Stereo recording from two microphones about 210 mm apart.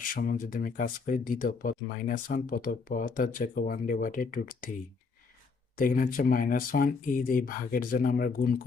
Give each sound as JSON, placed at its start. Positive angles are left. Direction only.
{"t": 0.1, "sound": "speech", "side_deg": 40}
{"t": 5.7, "sound": "speech", "side_deg": 40}